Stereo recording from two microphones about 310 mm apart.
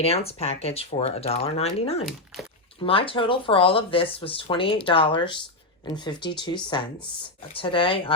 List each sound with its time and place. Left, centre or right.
0.0 s speech: centre